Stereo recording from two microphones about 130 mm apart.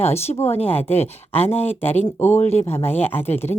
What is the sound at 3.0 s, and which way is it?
Speech, 15° left (ahead or behind).